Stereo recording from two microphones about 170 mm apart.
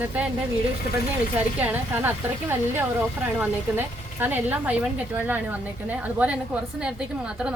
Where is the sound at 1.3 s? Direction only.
10° right (ahead or behind).